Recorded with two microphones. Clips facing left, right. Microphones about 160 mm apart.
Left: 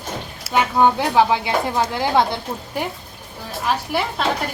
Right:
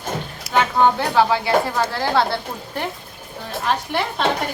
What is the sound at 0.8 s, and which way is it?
Speech, 15° left (ahead or behind).